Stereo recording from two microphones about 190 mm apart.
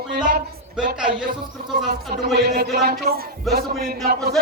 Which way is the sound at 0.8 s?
5° right (ahead or behind).